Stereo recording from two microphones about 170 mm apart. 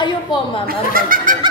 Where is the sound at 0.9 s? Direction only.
55° right (ahead or behind).